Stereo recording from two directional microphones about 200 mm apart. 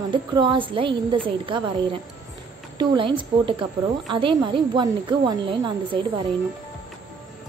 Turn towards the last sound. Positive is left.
turn(degrees=-25)  # may be behind; listen again after turning